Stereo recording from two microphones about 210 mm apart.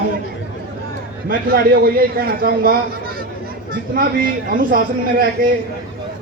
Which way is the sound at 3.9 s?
45° right (ahead or behind).